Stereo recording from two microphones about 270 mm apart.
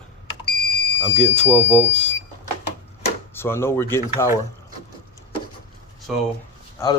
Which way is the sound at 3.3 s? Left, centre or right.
Centre.